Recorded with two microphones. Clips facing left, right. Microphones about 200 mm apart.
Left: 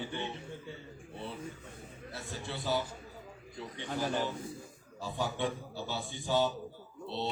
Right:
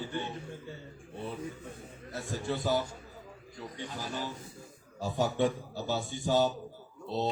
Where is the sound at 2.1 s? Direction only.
45° right (ahead or behind).